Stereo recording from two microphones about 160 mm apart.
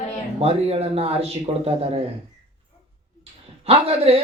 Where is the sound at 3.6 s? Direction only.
40° right (ahead or behind).